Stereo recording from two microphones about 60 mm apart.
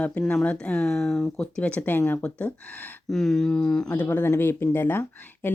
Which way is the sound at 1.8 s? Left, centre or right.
Left.